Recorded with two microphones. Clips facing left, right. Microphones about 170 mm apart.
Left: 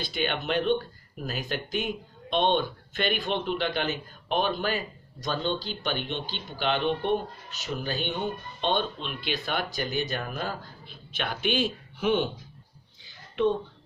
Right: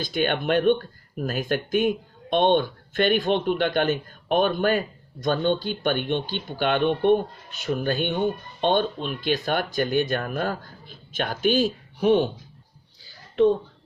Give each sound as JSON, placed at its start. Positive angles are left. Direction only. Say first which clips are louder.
{"t": 0.0, "sound": "speech", "louder": "right 6 dB", "side_deg": -50}